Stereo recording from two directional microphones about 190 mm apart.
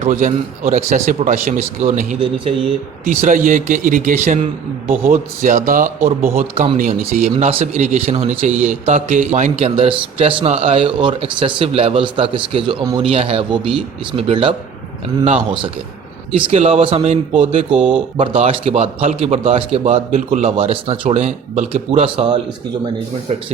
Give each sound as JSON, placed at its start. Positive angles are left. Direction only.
{"t": 0.0, "sound": "speech", "side_deg": -40}
{"t": 6.3, "sound": "speech", "side_deg": -30}
{"t": 6.7, "sound": "speech", "side_deg": -45}
{"t": 16.5, "sound": "speech", "side_deg": -30}